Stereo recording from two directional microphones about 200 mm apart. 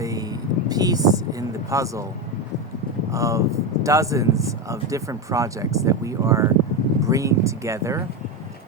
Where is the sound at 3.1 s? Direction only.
15° right (ahead or behind).